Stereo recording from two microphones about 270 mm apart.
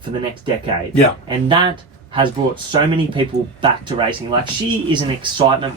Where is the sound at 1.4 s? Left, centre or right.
Centre.